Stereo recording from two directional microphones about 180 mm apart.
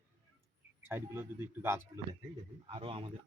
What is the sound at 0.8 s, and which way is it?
Speech, 10° right (ahead or behind).